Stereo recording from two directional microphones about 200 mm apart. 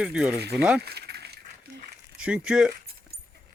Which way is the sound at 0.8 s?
55° right (ahead or behind).